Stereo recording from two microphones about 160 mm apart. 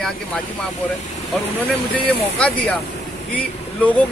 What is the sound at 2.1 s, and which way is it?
Speech, 5° left (ahead or behind).